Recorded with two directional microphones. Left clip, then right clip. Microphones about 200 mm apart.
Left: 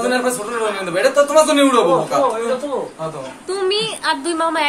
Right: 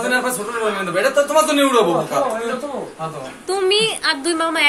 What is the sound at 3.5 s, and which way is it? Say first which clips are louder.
A woman's voice: right 2 dB; 10° left (ahead or behind).